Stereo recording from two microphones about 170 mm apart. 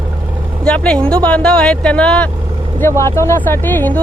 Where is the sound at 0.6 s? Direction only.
5° left (ahead or behind).